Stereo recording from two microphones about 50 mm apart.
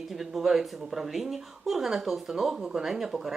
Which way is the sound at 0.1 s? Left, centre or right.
Centre.